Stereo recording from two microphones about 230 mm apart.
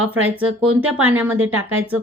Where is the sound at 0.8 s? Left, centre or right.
Right.